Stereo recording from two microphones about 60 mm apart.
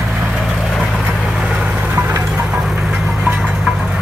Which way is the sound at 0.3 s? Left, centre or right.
Centre.